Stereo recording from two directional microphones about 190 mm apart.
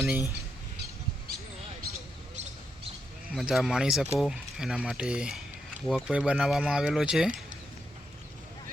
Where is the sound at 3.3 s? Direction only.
Centre (ahead or behind).